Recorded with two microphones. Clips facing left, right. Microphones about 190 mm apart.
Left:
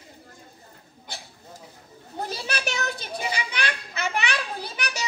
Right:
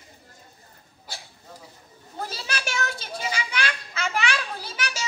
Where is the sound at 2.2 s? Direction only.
20° left (ahead or behind).